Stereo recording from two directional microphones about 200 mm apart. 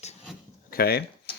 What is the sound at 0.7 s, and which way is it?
Speech, 50° left (ahead or behind).